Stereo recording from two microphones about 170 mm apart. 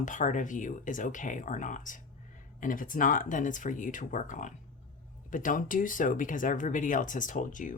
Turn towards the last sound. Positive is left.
turn(degrees=50)  # may be behind; listen again after turning